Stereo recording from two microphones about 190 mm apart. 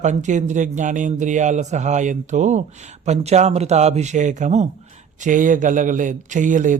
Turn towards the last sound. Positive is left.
turn(degrees=-40)  # may be behind; listen again after turning